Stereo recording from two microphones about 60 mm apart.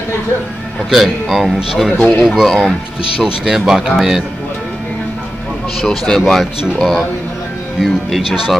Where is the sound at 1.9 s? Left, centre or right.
Centre.